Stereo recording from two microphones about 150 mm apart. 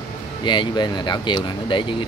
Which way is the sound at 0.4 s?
30° left (ahead or behind).